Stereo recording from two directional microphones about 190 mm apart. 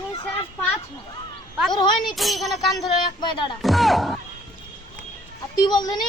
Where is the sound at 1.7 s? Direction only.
25° left (ahead or behind).